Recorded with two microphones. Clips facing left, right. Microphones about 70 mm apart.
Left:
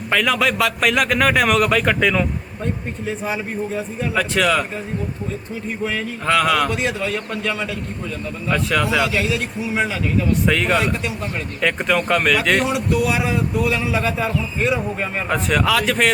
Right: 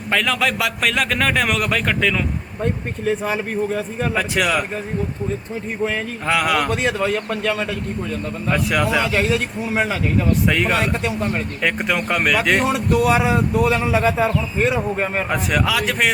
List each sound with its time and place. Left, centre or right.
0.1 s a man's voice: centre
4.1 s a man's voice: centre
6.2 s a man's voice: centre
6.7 s speech: right
8.4 s a man's voice: centre
9.0 s speech: right
10.4 s a man's voice: centre
12.6 s speech: right
15.3 s a man's voice: centre